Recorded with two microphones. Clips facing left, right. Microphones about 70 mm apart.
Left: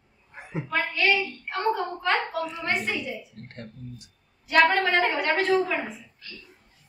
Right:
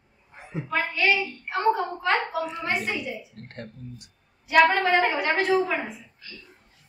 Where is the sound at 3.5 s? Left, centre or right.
Right.